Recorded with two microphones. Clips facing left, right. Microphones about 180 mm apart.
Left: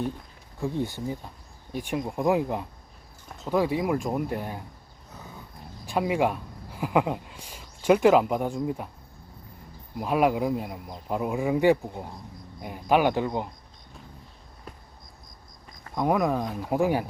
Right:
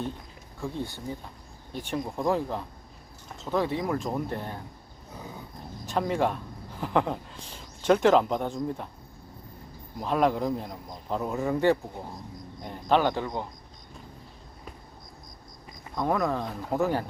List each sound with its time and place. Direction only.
0.6 s speech: 15° left (ahead or behind)
5.8 s speech: 10° left (ahead or behind)
10.0 s speech: 10° left (ahead or behind)
16.0 s speech: 15° left (ahead or behind)